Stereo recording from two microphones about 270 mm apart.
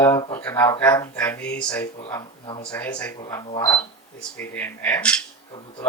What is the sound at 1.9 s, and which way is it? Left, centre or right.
Speech, centre.